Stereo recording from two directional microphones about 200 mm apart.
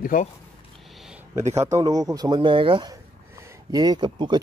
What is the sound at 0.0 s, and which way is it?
Speech, 40° left (ahead or behind).